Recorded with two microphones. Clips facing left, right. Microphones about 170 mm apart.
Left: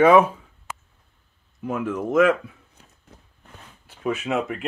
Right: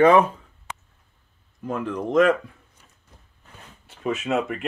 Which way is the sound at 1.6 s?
5° left (ahead or behind).